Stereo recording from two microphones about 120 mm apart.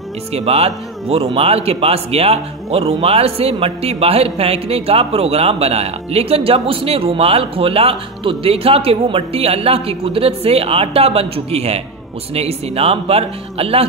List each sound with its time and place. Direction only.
0.3 s speech: 60° right (ahead or behind)